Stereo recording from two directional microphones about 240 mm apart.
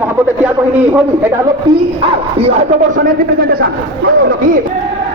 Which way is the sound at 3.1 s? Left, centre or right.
Right.